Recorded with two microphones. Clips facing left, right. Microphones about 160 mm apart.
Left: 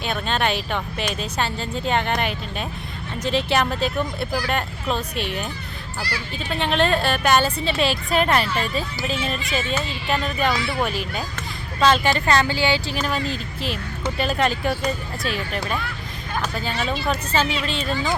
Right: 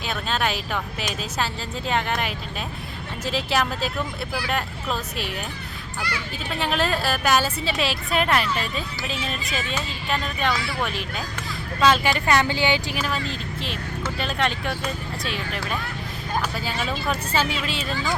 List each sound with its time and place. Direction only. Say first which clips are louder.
0.0 s a woman's voice: left 2 dB; centre (ahead or behind)
4.3 s speech: left 3 dB; 40° left (ahead or behind)
4.5 s a woman's voice: left 2 dB; centre (ahead or behind)
6.0 s speech: left 1 dB; 35° left (ahead or behind)
6.6 s a woman's voice: left 4 dB; 5° right (ahead or behind)
10.5 s speech: left 3 dB; 25° left (ahead or behind)
10.8 s a woman's voice: left 3 dB; centre (ahead or behind)
11.9 s a woman's voice: left 1 dB; 10° right (ahead or behind)
13.0 s a woman's voice: left 3 dB; centre (ahead or behind)